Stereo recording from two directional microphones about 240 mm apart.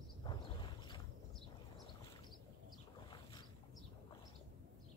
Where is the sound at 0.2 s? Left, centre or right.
Centre.